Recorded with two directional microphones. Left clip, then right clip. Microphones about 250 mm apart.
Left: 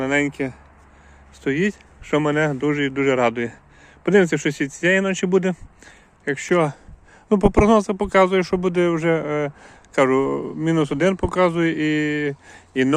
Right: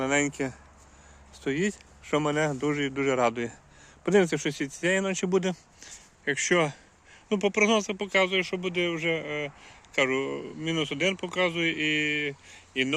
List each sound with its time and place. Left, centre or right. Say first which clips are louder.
0.0 s speech: left 5 dB; centre
7.3 s speech: left 8 dB; left